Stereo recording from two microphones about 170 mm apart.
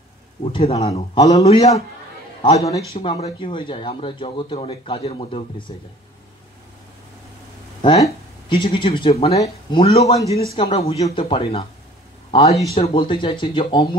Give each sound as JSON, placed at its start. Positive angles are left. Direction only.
{"t": 0.4, "sound": "speech", "side_deg": 35}
{"t": 8.0, "sound": "a man's voice", "side_deg": 30}